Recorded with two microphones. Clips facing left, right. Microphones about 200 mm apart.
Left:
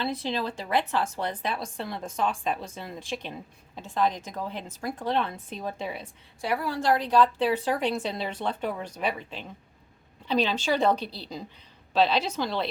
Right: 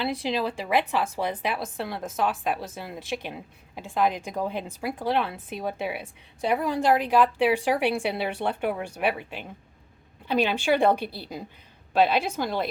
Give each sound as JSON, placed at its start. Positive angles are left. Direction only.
{"t": 0.0, "sound": "a woman's voice", "side_deg": -10}
{"t": 6.4, "sound": "a woman's voice", "side_deg": -20}
{"t": 12.0, "sound": "a woman's voice", "side_deg": -50}